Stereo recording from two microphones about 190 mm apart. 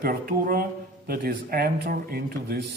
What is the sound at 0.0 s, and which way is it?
A man's voice, 50° right (ahead or behind).